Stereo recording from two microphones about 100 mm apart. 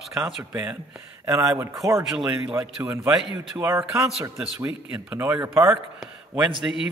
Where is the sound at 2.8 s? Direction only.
30° right (ahead or behind).